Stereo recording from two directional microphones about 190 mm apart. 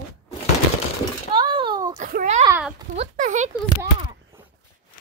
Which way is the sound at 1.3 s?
25° right (ahead or behind).